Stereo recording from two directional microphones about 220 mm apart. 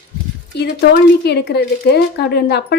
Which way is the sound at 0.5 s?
50° left (ahead or behind).